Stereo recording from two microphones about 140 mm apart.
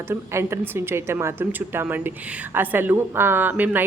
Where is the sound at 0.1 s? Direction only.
15° right (ahead or behind).